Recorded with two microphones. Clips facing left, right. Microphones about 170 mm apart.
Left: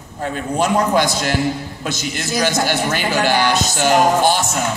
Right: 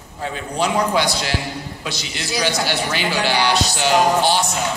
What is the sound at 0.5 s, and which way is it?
A man's voice, 45° left (ahead or behind).